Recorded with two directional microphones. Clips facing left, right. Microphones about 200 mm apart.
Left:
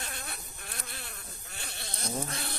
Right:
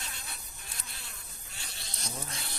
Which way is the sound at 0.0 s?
55° left (ahead or behind).